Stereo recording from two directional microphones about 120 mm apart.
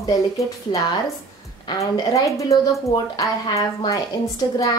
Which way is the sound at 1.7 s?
25° left (ahead or behind).